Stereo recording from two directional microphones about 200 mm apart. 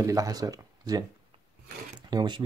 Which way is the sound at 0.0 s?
15° right (ahead or behind).